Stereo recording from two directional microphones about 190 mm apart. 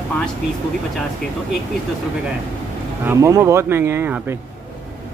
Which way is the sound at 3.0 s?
15° right (ahead or behind).